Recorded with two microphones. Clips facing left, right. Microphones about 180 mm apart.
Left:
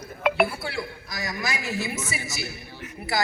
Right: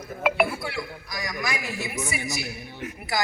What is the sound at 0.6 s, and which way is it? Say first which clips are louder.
A woman's voice: even; 30° left (ahead or behind).